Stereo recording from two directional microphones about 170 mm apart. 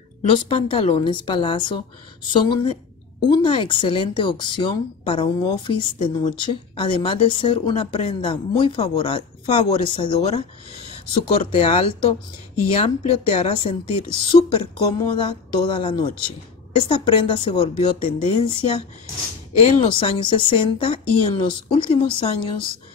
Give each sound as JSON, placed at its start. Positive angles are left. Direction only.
{"t": 0.3, "sound": "speech", "side_deg": 30}